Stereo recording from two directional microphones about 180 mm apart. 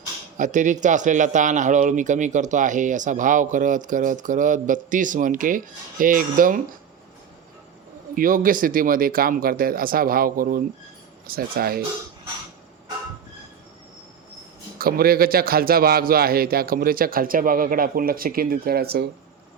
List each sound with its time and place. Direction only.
0.3 s speech: 45° right (ahead or behind)
8.1 s a man's voice: 50° right (ahead or behind)
14.8 s a man's voice: 55° right (ahead or behind)